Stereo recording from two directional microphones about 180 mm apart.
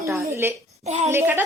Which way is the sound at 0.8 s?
40° right (ahead or behind).